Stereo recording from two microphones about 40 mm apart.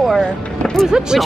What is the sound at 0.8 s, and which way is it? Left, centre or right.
Speech, centre.